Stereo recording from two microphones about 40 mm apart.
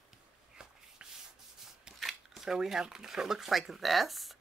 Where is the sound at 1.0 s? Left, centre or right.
Right.